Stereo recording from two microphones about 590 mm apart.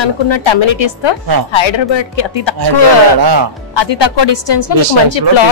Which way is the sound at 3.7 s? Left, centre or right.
Left.